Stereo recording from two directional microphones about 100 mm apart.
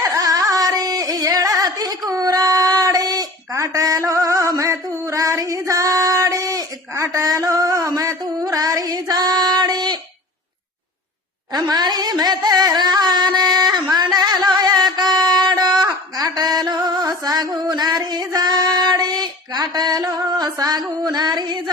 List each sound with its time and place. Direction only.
0.0 s carnatic music: 40° right (ahead or behind)
11.5 s a sound: 45° right (ahead or behind)
21.0 s music: 45° right (ahead or behind)